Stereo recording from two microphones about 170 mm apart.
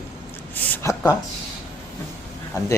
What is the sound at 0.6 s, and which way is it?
Speech, 10° left (ahead or behind).